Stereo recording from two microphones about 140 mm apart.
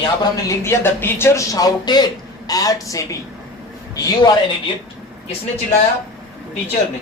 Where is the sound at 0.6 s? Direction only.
15° left (ahead or behind).